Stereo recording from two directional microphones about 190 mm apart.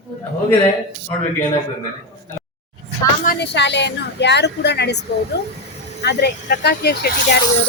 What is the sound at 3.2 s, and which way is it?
A woman's voice, 60° left (ahead or behind).